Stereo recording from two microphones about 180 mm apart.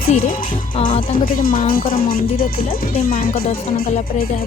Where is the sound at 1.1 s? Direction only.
50° left (ahead or behind).